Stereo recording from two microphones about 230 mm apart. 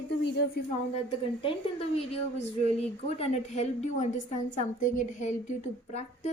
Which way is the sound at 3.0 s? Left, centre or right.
Left.